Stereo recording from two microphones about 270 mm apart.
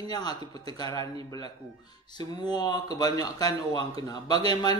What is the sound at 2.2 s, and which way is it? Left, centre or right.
Speech, centre.